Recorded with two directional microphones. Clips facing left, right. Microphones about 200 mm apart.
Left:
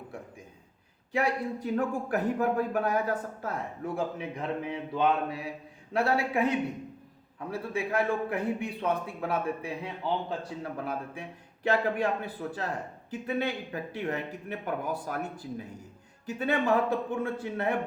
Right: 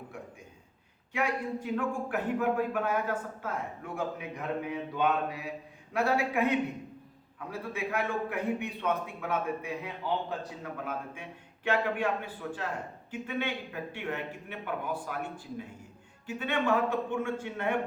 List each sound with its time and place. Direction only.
1.1 s a man's voice: 35° left (ahead or behind)
7.7 s speech: 30° left (ahead or behind)